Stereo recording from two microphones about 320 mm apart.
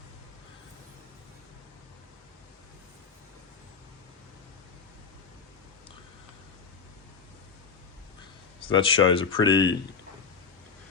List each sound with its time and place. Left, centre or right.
8.6 s speech: centre